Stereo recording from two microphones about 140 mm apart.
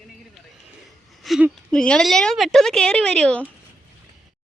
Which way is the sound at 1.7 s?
5° left (ahead or behind).